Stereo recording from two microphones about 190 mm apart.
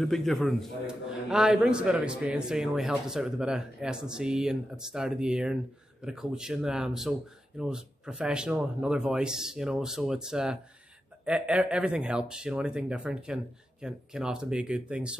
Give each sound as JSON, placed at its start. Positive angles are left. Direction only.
{"t": 0.0, "sound": "a man's voice", "side_deg": 0}